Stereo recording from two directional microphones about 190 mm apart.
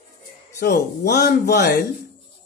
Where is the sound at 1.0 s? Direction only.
60° left (ahead or behind).